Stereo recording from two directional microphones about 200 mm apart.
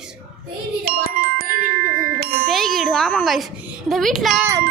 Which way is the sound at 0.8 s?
50° right (ahead or behind).